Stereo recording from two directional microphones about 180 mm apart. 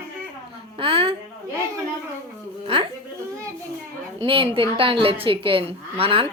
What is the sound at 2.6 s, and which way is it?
Speech, 30° right (ahead or behind).